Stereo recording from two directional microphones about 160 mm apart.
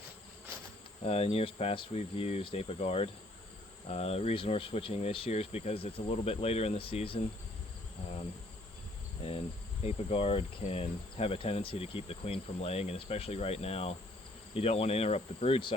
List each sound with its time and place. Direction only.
1.0 s insect: 40° left (ahead or behind)
9.8 s insect: 40° left (ahead or behind)